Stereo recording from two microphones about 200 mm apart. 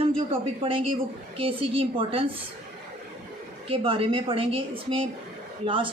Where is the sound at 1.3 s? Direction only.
30° right (ahead or behind).